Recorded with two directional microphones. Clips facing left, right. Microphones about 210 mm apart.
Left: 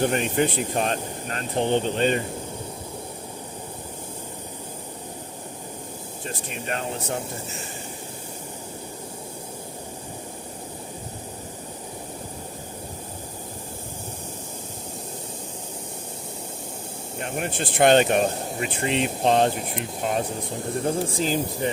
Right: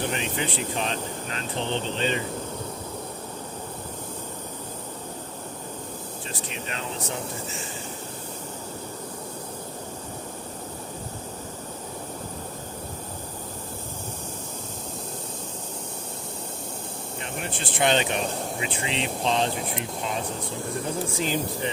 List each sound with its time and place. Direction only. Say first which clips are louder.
0.0 s speech: left 7 dB; 50° left (ahead or behind)
6.2 s speech: left 6 dB; 50° left (ahead or behind)
17.2 s speech: left 6 dB; 55° left (ahead or behind)
21.2 s speech: left 3 dB; 40° left (ahead or behind)